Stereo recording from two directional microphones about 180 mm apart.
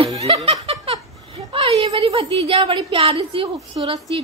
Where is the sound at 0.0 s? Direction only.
30° right (ahead or behind).